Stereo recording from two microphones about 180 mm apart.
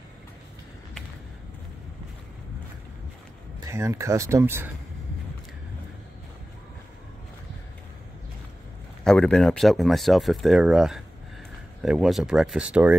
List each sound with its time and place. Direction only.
3.6 s speech: 15° right (ahead or behind)
9.0 s speech: 5° left (ahead or behind)